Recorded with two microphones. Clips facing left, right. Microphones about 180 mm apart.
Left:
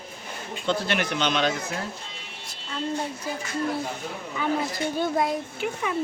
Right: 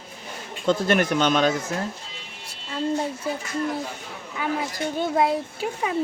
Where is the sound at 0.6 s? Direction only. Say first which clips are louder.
Right 5 dB; 45° right (ahead or behind).